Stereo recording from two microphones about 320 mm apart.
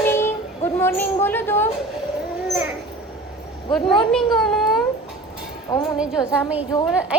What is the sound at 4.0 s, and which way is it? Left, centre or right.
Speech, centre.